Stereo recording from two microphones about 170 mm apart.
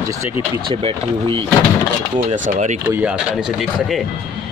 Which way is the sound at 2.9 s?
10° right (ahead or behind).